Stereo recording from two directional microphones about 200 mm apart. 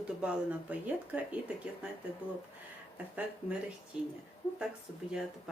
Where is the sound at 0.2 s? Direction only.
5° right (ahead or behind).